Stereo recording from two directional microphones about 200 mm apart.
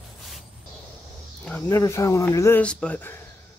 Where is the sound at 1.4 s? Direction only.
15° left (ahead or behind).